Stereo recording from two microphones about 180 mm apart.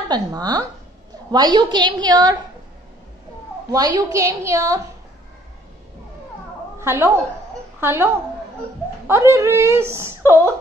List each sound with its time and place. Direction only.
0.1 s a woman's voice: 20° right (ahead or behind)
3.7 s speech: 20° right (ahead or behind)
6.8 s a woman's voice: 15° right (ahead or behind)